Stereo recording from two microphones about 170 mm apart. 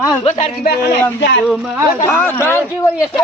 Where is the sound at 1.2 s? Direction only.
90° left.